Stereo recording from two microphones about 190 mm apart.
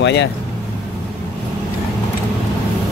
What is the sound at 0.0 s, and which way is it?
Speech, 65° left (ahead or behind).